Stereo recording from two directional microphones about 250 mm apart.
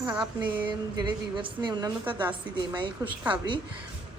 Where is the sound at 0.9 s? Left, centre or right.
Centre.